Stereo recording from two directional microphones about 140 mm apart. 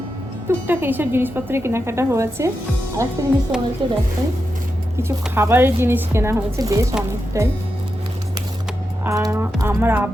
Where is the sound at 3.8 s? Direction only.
35° right (ahead or behind).